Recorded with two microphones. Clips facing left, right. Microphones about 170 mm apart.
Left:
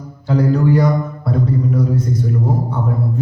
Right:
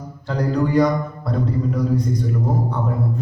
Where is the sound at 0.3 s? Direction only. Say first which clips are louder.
Left 5 dB; 5° left (ahead or behind).